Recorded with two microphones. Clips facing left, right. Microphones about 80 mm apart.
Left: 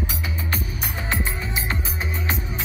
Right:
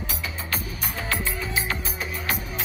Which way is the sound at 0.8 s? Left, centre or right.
Left.